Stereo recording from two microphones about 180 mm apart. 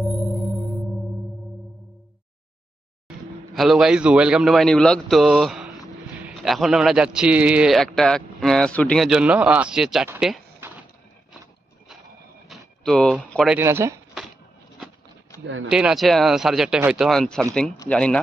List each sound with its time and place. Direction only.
0.1 s music: centre (ahead or behind)
3.5 s a man's voice: centre (ahead or behind)
10.6 s a sound: 10° right (ahead or behind)
12.4 s a sound: centre (ahead or behind)
13.3 s a man's voice: centre (ahead or behind)
13.6 s speech: 15° right (ahead or behind)
15.4 s speech: 90° right
15.7 s a man's voice: 5° right (ahead or behind)